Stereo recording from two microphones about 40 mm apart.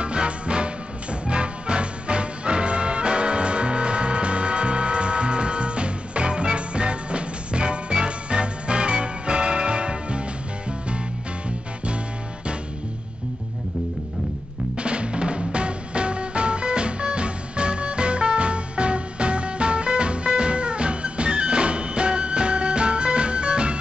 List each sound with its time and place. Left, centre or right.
0.0 s music: right
14.8 s music: right